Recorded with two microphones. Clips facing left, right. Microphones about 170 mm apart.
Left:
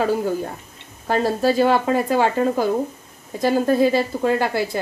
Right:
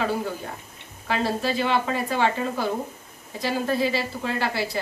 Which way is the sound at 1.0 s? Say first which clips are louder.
Left 6 dB; 45° left (ahead or behind).